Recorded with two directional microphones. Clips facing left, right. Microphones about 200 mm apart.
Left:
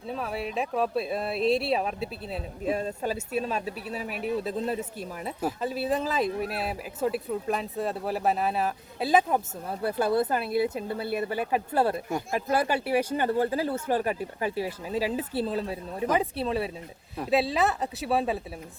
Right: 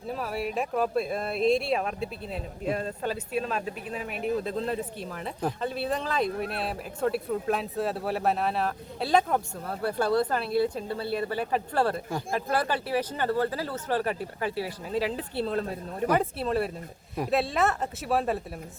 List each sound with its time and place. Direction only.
0.1 s speech: centre (ahead or behind)
4.4 s speech: 5° left (ahead or behind)
9.6 s speech: 20° left (ahead or behind)
10.2 s speech: 5° left (ahead or behind)
10.6 s speech: 20° left (ahead or behind); by 18.4 s centre (ahead or behind)